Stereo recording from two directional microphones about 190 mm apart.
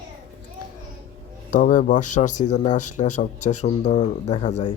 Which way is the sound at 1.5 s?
45° left (ahead or behind).